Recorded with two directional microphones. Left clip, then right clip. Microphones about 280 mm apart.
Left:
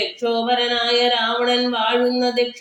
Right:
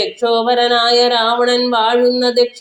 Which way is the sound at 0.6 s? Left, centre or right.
Centre.